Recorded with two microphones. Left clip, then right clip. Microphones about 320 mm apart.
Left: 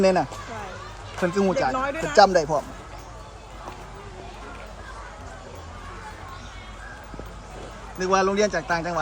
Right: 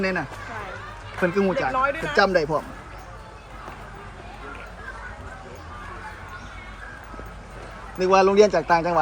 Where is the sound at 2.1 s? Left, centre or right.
Centre.